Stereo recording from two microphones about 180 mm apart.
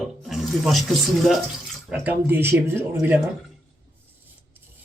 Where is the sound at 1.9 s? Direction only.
10° right (ahead or behind).